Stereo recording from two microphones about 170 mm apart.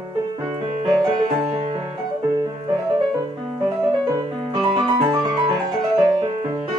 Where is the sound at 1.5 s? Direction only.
30° right (ahead or behind).